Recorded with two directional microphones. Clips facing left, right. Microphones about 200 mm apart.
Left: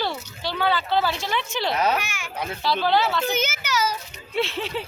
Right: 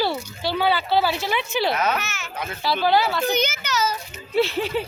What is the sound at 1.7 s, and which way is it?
Speech, 30° left (ahead or behind).